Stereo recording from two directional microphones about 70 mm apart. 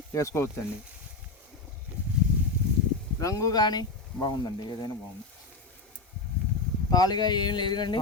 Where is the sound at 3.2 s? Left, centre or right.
Left.